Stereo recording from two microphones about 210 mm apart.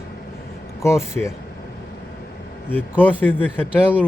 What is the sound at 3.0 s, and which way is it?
Speech, 10° left (ahead or behind).